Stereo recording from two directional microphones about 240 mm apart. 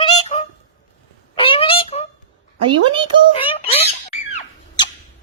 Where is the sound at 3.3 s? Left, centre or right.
Left.